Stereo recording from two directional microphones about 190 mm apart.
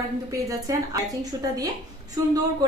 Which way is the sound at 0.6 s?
20° right (ahead or behind).